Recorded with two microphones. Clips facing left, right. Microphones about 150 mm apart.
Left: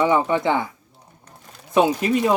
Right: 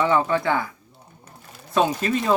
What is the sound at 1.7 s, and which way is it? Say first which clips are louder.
Speech: left 3 dB; 15° left (ahead or behind).